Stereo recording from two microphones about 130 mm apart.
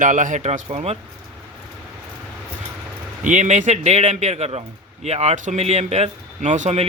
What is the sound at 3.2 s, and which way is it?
Speech, 75° right (ahead or behind).